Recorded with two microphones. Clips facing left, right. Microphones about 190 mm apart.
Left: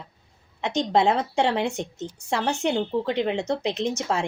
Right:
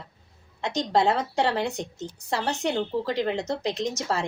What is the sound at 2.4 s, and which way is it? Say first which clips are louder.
Speech: left 3 dB; centre (ahead or behind).